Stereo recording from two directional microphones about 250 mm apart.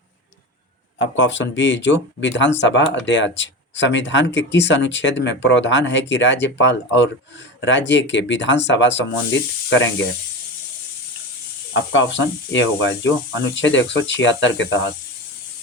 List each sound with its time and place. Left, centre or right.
1.1 s speech: left
11.7 s speech: left